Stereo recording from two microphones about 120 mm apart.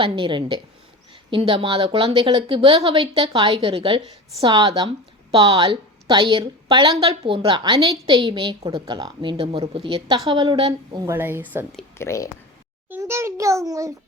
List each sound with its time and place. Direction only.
0.0 s a woman's voice: 45° right (ahead or behind)
4.9 s a sound: 50° right (ahead or behind)
5.5 s a woman's voice: 40° right (ahead or behind)
11.1 s speech: 15° right (ahead or behind)
11.9 s speech: 25° left (ahead or behind)
12.9 s a child's voice: 20° right (ahead or behind)